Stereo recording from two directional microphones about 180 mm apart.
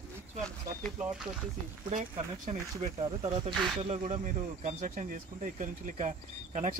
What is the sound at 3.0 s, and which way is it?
Speech, 30° right (ahead or behind).